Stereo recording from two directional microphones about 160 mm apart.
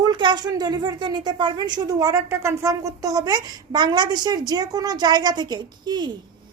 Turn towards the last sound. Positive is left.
turn(degrees=-25)  # may be behind; listen again after turning